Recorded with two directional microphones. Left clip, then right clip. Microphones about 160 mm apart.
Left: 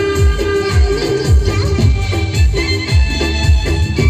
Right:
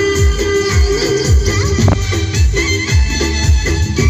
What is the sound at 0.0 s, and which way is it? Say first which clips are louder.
Music: right 1 dB; 15° right (ahead or behind).